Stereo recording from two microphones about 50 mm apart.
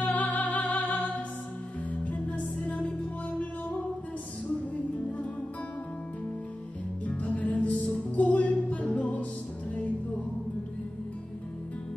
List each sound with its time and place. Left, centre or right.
0.0 s music: left
7.1 s music: left